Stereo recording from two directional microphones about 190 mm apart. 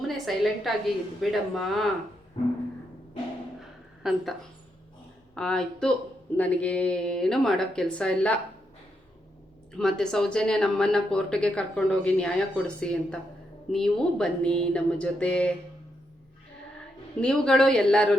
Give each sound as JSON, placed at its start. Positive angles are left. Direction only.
{"t": 0.3, "sound": "speech", "side_deg": 0}
{"t": 2.4, "sound": "music", "side_deg": 30}
{"t": 3.6, "sound": "a sound", "side_deg": 0}
{"t": 5.3, "sound": "speech", "side_deg": 5}
{"t": 9.7, "sound": "speech", "side_deg": 5}
{"t": 17.2, "sound": "speech", "side_deg": 5}